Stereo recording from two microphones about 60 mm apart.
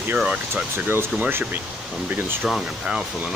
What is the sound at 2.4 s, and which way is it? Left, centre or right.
Speech, centre.